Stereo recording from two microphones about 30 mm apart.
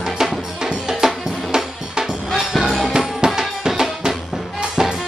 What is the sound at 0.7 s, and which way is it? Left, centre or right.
Music, centre.